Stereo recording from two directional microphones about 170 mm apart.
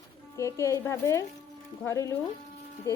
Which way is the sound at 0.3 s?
15° left (ahead or behind).